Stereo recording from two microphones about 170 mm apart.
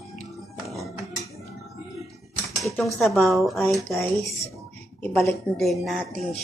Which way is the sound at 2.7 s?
Centre (ahead or behind).